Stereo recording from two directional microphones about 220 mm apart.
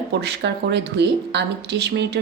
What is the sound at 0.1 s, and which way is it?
A woman's voice, 50° right (ahead or behind).